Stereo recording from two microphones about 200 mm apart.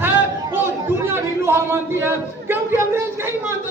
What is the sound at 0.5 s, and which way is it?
Chatter, 10° right (ahead or behind).